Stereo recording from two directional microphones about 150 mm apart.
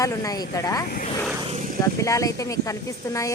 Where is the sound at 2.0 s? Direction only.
20° left (ahead or behind).